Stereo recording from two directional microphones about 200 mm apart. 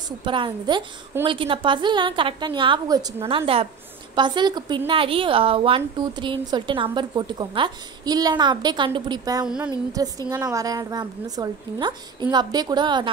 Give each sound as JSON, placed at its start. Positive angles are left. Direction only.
{"t": 0.2, "sound": "a woman's voice", "side_deg": -25}